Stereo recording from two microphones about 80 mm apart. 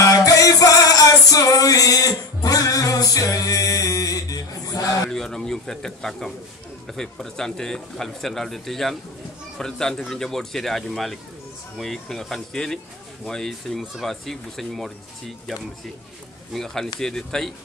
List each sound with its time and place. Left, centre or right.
0.0 s music: left
5.1 s a man's voice: centre
16.5 s speech: centre